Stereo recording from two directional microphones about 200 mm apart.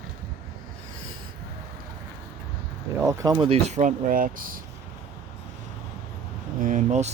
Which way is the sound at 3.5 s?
35° right (ahead or behind).